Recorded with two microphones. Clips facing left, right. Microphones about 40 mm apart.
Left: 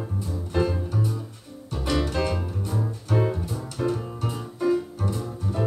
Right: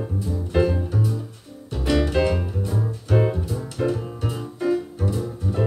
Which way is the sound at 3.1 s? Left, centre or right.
Centre.